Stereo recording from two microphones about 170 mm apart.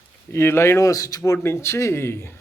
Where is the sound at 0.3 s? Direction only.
15° left (ahead or behind).